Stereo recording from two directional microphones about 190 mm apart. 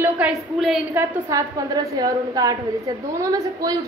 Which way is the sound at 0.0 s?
5° right (ahead or behind).